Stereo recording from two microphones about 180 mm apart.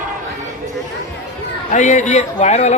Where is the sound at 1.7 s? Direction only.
40° left (ahead or behind).